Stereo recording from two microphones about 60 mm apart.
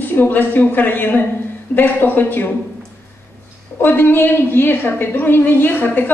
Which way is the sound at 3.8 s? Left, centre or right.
Left.